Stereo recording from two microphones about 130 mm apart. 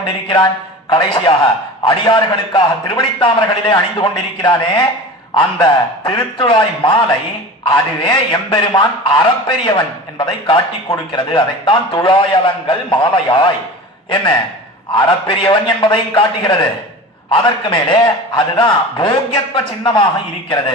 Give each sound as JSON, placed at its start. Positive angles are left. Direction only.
{"t": 0.0, "sound": "a man's voice", "side_deg": 40}
{"t": 15.0, "sound": "a man's voice", "side_deg": 40}